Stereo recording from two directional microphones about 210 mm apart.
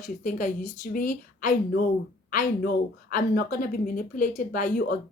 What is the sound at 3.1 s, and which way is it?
Speech, 40° left (ahead or behind).